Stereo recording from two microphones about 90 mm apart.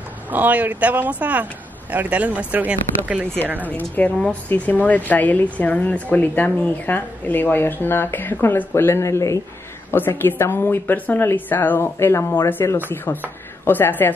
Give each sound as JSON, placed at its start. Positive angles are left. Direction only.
{"t": 0.3, "sound": "speech", "side_deg": -20}
{"t": 3.6, "sound": "a woman's voice", "side_deg": 20}
{"t": 9.8, "sound": "a woman's voice", "side_deg": 25}